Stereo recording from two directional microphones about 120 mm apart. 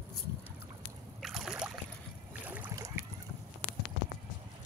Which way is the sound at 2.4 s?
15° right (ahead or behind).